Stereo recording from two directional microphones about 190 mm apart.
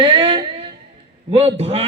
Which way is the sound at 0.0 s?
25° right (ahead or behind).